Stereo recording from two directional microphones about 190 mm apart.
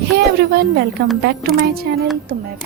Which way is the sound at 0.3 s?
55° right (ahead or behind).